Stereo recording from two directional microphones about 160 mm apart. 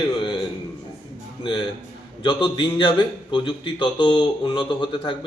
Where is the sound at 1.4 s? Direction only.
30° left (ahead or behind).